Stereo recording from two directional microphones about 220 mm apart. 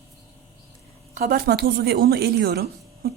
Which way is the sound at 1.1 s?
40° right (ahead or behind).